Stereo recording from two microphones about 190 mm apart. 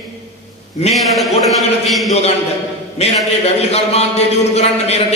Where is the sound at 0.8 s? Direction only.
35° left (ahead or behind).